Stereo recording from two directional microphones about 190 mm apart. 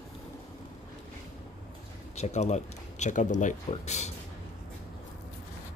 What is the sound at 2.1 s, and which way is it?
Speech, 35° left (ahead or behind).